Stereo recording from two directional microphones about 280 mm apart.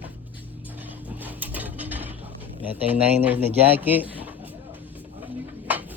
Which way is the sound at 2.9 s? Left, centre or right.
Centre.